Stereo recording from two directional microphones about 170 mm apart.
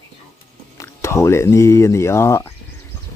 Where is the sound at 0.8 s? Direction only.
15° left (ahead or behind).